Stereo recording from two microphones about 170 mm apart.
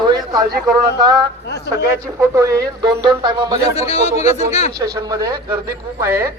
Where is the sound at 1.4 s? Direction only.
75° left (ahead or behind).